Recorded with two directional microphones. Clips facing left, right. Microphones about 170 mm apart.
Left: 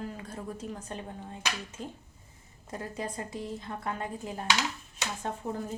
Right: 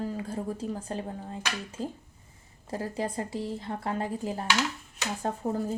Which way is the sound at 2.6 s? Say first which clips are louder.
Right 5 dB; 30° right (ahead or behind).